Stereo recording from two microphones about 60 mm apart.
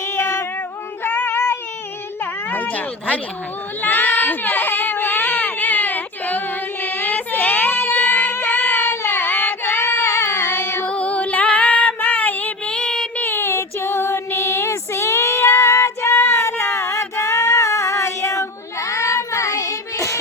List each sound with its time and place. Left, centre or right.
0.2 s female singing: left
1.0 s a sound: left
2.5 s speech: left
3.8 s a sound: left
6.8 s child singing: left
10.8 s female singing: left
11.9 s child singing: left
12.7 s child singing: centre
13.1 s child singing: left